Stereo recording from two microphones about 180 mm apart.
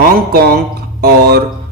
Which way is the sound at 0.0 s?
55° right (ahead or behind).